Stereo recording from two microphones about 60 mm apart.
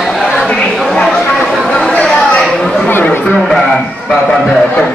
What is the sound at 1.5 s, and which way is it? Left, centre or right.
Chatter, centre.